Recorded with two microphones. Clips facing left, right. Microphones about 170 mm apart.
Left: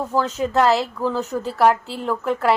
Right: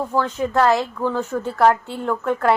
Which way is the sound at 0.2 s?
30° left (ahead or behind).